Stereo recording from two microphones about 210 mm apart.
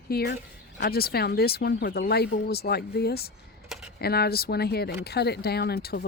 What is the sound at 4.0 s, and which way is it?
Speech, 50° left (ahead or behind).